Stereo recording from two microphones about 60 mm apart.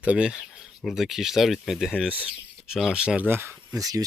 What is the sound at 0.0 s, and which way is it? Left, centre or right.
Speech, centre.